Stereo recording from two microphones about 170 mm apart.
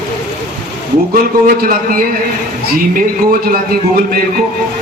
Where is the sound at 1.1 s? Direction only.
55° right (ahead or behind).